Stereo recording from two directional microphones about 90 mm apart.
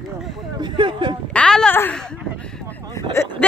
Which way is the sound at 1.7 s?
20° left (ahead or behind).